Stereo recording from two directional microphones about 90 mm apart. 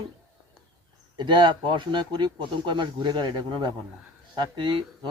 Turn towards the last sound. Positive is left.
turn(degrees=-60)  # may be behind; listen again after turning